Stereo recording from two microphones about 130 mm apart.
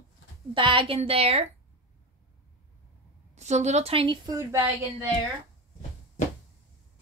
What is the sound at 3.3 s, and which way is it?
Speech, 60° right (ahead or behind).